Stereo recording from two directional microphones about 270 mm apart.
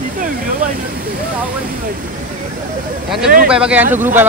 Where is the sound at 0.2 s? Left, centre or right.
Right.